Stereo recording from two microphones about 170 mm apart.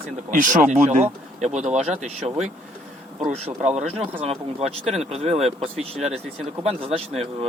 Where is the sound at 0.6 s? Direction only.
10° right (ahead or behind).